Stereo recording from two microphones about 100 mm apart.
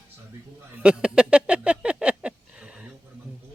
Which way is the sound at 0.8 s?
10° right (ahead or behind).